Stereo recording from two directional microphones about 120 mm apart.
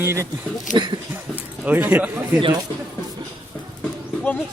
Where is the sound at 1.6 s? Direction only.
15° right (ahead or behind).